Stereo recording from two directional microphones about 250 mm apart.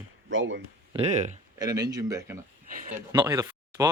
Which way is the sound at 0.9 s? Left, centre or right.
Right.